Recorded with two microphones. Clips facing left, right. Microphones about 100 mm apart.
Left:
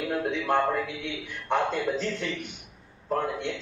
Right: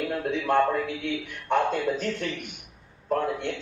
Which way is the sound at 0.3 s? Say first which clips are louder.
Right 3 dB; 50° right (ahead or behind).